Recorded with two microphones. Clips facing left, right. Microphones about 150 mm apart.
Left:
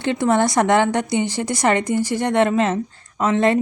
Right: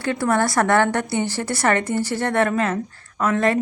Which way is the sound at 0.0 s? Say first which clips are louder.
Left 2 dB; 20° left (ahead or behind).